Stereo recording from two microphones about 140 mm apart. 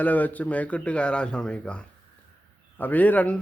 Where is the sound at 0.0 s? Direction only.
10° left (ahead or behind).